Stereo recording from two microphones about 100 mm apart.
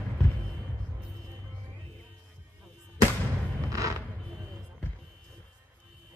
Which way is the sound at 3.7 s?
35° right (ahead or behind).